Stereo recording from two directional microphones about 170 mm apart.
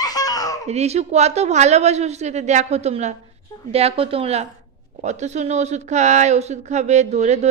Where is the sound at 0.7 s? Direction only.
40° right (ahead or behind).